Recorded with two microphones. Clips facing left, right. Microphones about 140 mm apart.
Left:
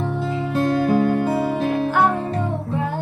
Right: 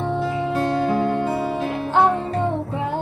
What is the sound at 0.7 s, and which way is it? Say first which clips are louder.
Music: left 2 dB; 25° right (ahead or behind).